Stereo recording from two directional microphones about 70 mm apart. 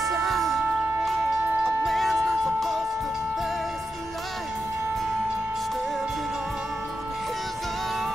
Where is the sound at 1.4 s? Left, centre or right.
Right.